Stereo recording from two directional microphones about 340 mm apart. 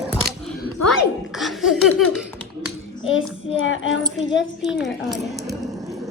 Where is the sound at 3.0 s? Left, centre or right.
Left.